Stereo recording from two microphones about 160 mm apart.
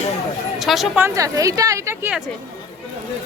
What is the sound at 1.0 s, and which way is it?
A woman's voice, 20° right (ahead or behind).